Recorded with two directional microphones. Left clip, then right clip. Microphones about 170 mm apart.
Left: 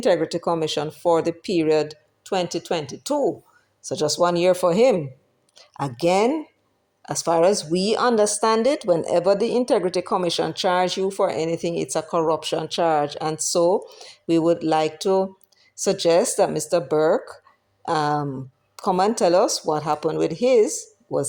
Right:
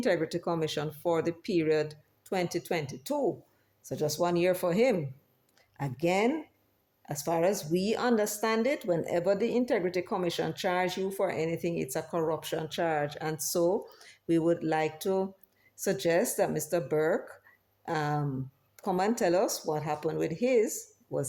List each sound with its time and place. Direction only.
0.0 s speech: 30° left (ahead or behind)